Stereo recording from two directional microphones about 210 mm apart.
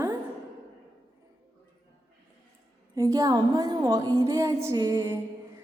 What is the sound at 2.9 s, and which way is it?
A woman's voice, 15° right (ahead or behind).